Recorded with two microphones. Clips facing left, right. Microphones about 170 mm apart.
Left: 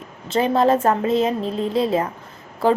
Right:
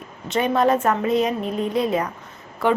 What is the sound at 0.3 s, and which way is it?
A woman's voice, 30° left (ahead or behind).